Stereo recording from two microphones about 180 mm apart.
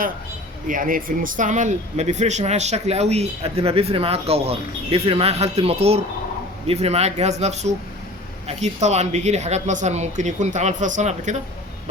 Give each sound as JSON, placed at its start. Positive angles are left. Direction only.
{"t": 0.7, "sound": "speech", "side_deg": -50}